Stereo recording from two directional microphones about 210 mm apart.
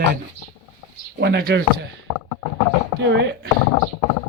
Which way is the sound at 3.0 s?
55° right (ahead or behind).